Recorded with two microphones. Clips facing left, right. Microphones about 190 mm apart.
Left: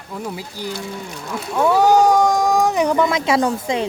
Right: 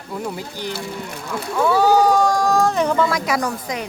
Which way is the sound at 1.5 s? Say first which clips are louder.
Left 1 dB; 15° left (ahead or behind).